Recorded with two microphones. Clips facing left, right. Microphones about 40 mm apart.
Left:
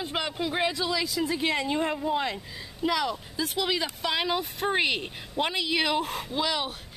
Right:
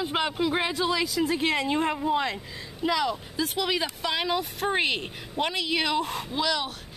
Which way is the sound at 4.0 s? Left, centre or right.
Centre.